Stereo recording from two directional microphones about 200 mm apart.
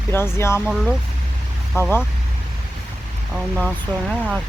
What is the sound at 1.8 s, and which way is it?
Speech, 15° left (ahead or behind).